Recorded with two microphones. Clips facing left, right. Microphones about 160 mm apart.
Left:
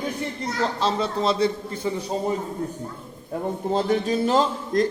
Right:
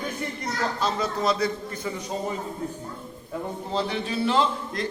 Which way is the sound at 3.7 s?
45° left (ahead or behind).